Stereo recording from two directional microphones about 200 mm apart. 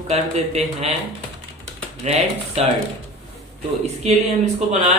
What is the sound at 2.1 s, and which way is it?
Speech, 30° right (ahead or behind).